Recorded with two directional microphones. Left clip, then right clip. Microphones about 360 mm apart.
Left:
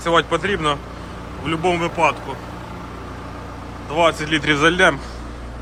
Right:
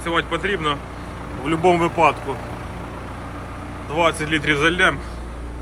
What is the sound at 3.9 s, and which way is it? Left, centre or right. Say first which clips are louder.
Speech: left 2 dB; centre.